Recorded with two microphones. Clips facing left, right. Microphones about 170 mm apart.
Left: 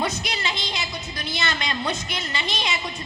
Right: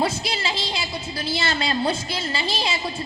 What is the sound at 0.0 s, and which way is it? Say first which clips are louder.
A woman's voice: right 3 dB; 30° right (ahead or behind).